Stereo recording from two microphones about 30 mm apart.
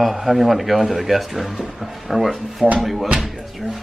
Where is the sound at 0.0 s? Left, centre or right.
Centre.